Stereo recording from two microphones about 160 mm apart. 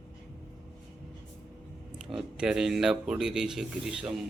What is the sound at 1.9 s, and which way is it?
Speech, 5° right (ahead or behind).